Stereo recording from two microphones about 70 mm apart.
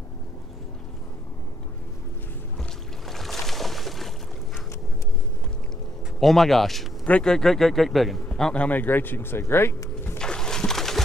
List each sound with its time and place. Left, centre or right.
3.1 s boat: centre
6.1 s speech: centre
7.1 s speech: centre
8.3 s a man's voice: centre
8.6 s speech: left
10.1 s a sound: centre